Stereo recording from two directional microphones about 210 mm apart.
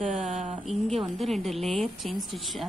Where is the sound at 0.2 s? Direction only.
35° right (ahead or behind).